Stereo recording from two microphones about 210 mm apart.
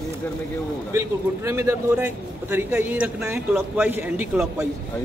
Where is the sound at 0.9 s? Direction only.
15° right (ahead or behind).